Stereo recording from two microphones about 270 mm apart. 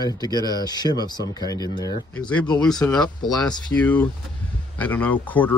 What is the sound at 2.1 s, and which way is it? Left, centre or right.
Speech, centre.